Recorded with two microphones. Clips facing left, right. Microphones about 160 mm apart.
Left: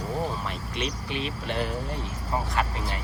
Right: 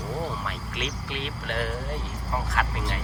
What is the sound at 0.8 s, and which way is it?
Speech, centre (ahead or behind).